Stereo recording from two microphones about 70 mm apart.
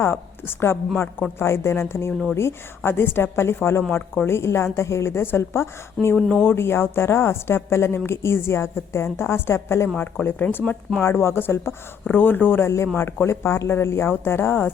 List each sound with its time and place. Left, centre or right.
0.0 s a woman's voice: left
6.1 s speech: centre
6.4 s a woman's voice: left
10.0 s speech: left
11.0 s speech: left
12.6 s a woman's voice: left